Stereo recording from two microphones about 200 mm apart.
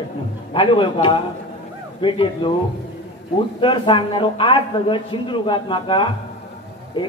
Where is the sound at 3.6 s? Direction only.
25° left (ahead or behind).